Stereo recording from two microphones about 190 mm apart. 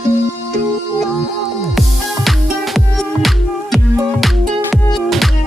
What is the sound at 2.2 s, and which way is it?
Music, centre (ahead or behind).